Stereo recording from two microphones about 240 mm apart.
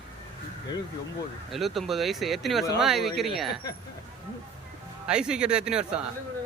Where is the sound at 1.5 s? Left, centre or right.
Centre.